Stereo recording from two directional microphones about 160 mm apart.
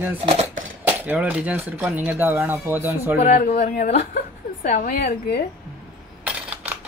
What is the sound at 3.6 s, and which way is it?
A woman's voice, 60° left (ahead or behind).